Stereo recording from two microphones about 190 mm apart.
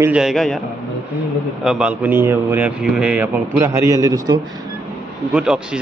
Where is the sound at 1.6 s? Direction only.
5° right (ahead or behind).